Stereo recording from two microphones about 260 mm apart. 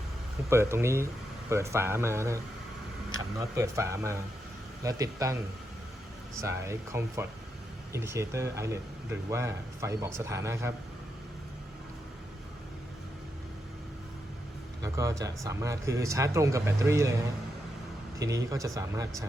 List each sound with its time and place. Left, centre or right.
0.5 s speech: centre
6.4 s speech: centre
14.8 s speech: centre
18.2 s speech: centre